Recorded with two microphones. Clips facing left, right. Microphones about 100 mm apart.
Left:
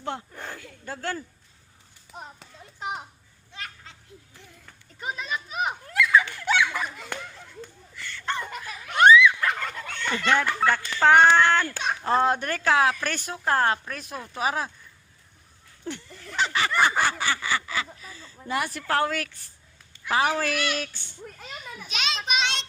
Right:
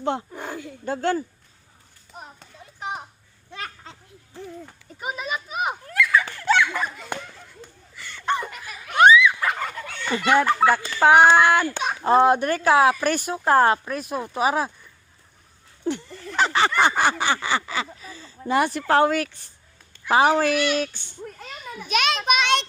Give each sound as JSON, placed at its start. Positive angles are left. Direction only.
{"t": 0.0, "sound": "speech", "side_deg": -20}
{"t": 3.5, "sound": "children playing", "side_deg": -55}
{"t": 4.9, "sound": "speech", "side_deg": -10}
{"t": 5.9, "sound": "a sound", "side_deg": 20}
{"t": 7.9, "sound": "turkey", "side_deg": -15}
{"t": 13.4, "sound": "speech", "side_deg": -20}
{"t": 15.8, "sound": "a sound", "side_deg": -20}
{"t": 16.4, "sound": "honk", "side_deg": -30}
{"t": 17.0, "sound": "speech", "side_deg": -20}
{"t": 21.8, "sound": "a sound", "side_deg": -55}